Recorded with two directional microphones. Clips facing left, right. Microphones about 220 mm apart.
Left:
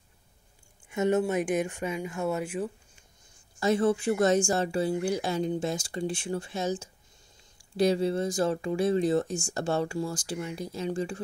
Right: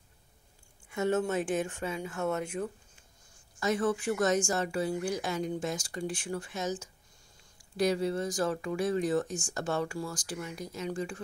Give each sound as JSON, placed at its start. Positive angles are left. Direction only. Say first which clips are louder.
{"t": 0.8, "sound": "speech", "louder": "left 4 dB", "side_deg": 20}
{"t": 3.5, "sound": "speech", "louder": "left 4 dB", "side_deg": 30}